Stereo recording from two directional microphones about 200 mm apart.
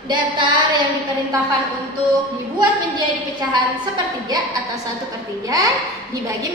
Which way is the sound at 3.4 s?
20° right (ahead or behind).